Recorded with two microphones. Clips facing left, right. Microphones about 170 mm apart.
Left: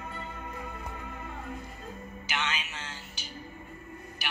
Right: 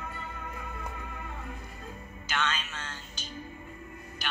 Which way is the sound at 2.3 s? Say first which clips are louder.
Right 2 dB; 15° left (ahead or behind).